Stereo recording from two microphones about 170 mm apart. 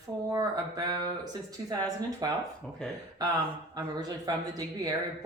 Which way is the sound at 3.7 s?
25° right (ahead or behind).